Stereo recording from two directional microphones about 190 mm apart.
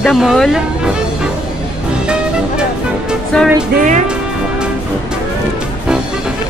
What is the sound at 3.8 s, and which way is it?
Speech, 40° right (ahead or behind).